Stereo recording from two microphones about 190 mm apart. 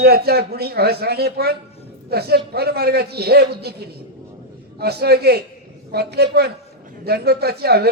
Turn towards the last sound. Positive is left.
turn(degrees=-55)  # may be behind; listen again after turning